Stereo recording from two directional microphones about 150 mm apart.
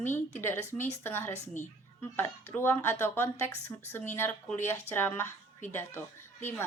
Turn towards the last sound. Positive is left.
turn(degrees=15)  # may be behind; listen again after turning